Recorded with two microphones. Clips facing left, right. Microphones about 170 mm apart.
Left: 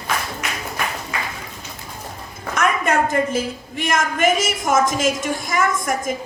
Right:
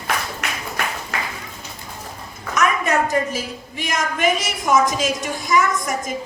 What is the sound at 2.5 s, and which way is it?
A woman's voice, 55° left (ahead or behind).